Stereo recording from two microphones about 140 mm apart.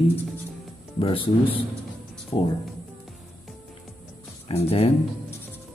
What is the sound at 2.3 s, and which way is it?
Speech, 40° left (ahead or behind).